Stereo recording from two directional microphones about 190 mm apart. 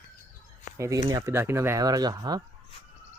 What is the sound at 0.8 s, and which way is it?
Speech, 15° right (ahead or behind).